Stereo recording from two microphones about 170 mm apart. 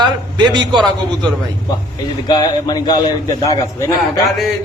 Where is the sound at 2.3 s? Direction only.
25° left (ahead or behind).